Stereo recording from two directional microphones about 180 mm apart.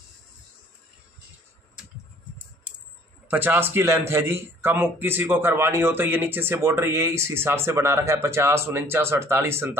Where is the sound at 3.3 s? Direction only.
10° right (ahead or behind).